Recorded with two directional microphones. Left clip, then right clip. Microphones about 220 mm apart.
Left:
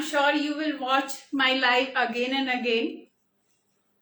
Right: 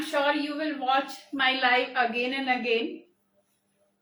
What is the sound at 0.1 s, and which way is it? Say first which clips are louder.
A woman's voice: left 2 dB; 15° left (ahead or behind).